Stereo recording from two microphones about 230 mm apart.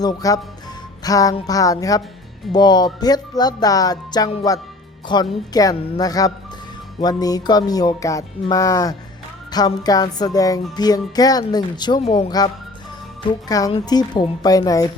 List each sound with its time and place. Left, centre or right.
0.0 s music: centre